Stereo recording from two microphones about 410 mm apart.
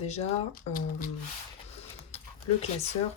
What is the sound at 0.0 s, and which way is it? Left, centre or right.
Speech, centre.